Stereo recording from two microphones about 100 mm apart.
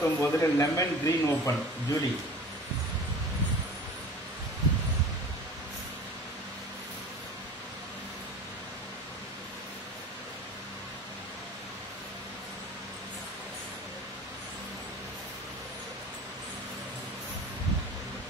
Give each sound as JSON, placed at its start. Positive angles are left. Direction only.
{"t": 0.0, "sound": "speech", "side_deg": 30}